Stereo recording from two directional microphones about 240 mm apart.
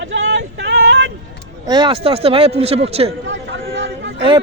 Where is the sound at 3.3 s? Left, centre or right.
Right.